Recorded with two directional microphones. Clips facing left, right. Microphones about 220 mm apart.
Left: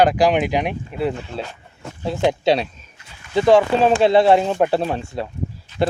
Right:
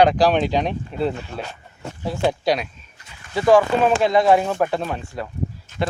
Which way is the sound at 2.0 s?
25° left (ahead or behind).